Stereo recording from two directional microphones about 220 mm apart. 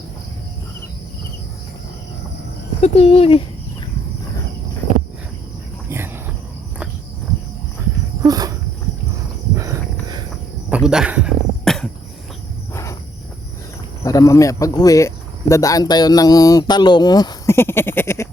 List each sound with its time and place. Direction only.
2.8 s speech: 30° left (ahead or behind)
8.2 s insect: 15° right (ahead or behind)
9.6 s a sound: 15° right (ahead or behind)
10.7 s a sound: 5° right (ahead or behind)
12.7 s cricket: 15° left (ahead or behind)
14.0 s speech: 15° left (ahead or behind)